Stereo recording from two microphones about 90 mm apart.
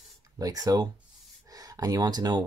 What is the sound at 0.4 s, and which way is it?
Speech, 45° right (ahead or behind).